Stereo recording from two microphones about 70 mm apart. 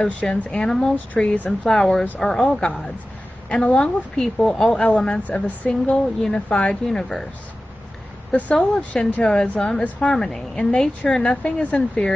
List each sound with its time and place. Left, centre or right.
0.0 s speech: centre
1.1 s speech: left
1.7 s speech: centre
8.3 s speech: centre